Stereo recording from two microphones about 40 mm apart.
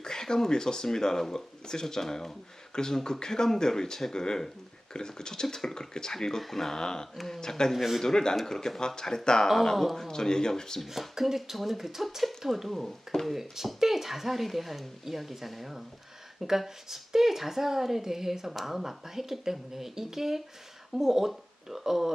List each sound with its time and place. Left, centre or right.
0.0 s speech: centre
7.7 s speech: centre
8.0 s speech: centre
9.7 s speech: centre
10.1 s speech: centre
10.8 s a woman's voice: centre